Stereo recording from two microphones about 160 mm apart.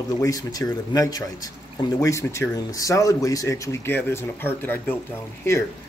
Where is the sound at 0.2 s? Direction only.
20° left (ahead or behind).